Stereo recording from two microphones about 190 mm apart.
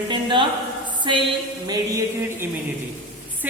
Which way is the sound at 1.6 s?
20° right (ahead or behind).